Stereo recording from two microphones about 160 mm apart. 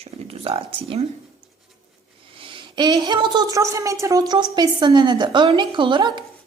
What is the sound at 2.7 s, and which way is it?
Speech, 25° right (ahead or behind).